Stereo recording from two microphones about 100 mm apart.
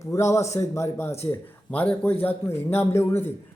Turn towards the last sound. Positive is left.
turn(degrees=25)  # may be behind; listen again after turning